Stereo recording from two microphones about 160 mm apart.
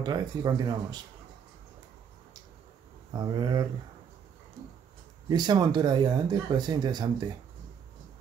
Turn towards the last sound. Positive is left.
turn(degrees=-25)  # may be behind; listen again after turning